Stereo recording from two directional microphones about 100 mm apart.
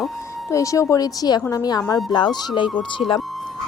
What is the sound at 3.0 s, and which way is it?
Speech, 80° left.